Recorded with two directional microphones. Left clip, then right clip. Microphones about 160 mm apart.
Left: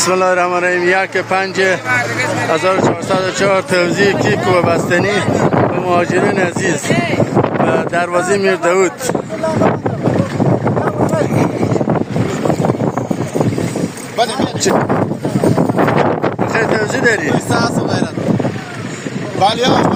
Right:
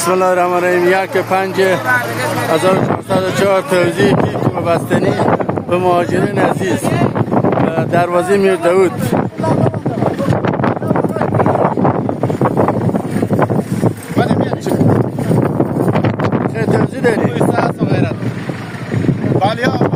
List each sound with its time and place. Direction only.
0.1 s speech: 5° right (ahead or behind)
5.8 s speech: 15° right (ahead or behind)
7.7 s speech: 5° right (ahead or behind)
16.6 s speech: centre (ahead or behind)
19.4 s speech: centre (ahead or behind)